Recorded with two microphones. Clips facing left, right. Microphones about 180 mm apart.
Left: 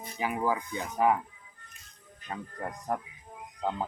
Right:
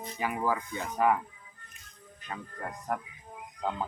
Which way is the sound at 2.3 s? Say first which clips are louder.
Left 2 dB; 30° left (ahead or behind).